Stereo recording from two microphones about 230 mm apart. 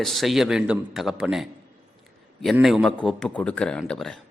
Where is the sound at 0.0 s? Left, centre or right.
Centre.